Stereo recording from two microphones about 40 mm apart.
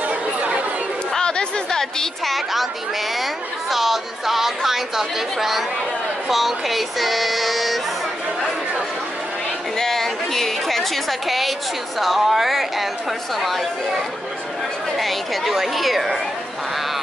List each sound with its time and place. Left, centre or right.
0.1 s chatter: right
1.1 s chatter: left
2.2 s speech: centre
3.7 s speech: centre
8.4 s chatter: centre
9.8 s a woman's voice: centre
15.0 s speech: centre